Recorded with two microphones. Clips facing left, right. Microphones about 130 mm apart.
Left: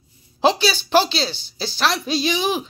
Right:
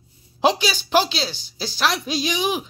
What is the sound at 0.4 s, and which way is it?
A woman's voice, 10° right (ahead or behind).